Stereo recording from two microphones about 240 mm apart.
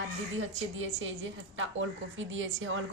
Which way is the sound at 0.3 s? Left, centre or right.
Right.